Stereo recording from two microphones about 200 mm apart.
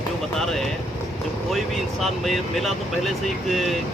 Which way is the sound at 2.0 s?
Centre (ahead or behind).